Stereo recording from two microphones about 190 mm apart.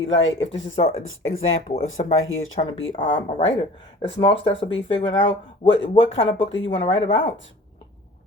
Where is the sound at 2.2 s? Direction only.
90° left.